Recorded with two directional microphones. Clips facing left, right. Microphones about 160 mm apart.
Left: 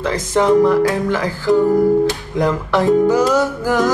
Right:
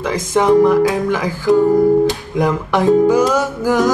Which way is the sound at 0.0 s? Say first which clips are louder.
Right 1 dB; 15° right (ahead or behind).